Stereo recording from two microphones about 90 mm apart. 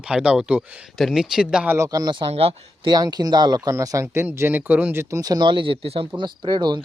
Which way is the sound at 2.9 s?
45° right (ahead or behind).